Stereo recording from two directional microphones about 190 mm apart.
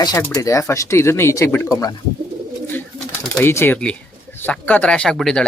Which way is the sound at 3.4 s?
10° left (ahead or behind).